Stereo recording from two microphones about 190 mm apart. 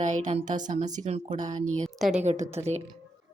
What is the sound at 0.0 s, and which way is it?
Speech, 40° right (ahead or behind).